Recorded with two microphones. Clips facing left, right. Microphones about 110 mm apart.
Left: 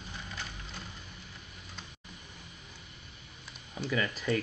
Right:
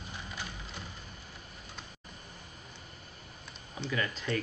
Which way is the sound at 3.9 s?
5° left (ahead or behind).